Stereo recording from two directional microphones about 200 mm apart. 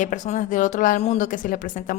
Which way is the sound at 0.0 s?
40° left (ahead or behind).